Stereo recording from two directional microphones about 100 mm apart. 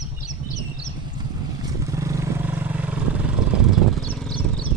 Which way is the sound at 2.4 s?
20° right (ahead or behind).